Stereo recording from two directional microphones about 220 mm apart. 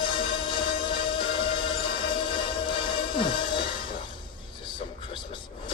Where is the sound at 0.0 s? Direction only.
20° left (ahead or behind).